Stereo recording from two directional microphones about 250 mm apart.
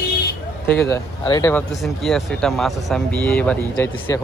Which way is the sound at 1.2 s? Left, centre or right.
Centre.